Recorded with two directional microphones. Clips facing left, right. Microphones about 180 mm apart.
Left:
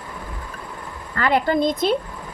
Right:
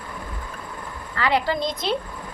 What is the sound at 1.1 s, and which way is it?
Speech, 50° left (ahead or behind).